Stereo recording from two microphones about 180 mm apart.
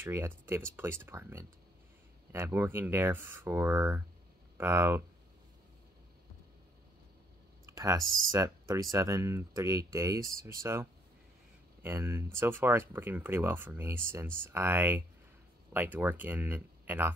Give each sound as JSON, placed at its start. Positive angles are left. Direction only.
{"t": 0.0, "sound": "speech", "side_deg": -15}
{"t": 7.6, "sound": "speech", "side_deg": -20}